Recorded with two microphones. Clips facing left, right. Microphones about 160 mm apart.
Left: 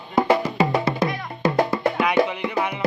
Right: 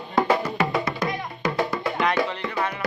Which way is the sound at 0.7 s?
30° left (ahead or behind).